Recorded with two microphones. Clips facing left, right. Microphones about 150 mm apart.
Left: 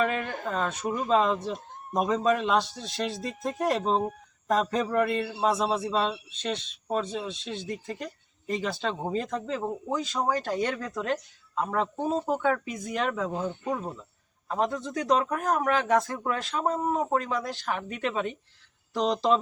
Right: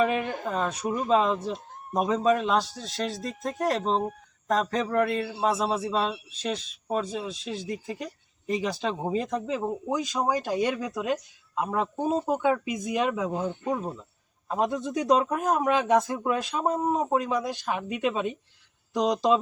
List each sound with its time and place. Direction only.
0.0 s speech: 5° right (ahead or behind)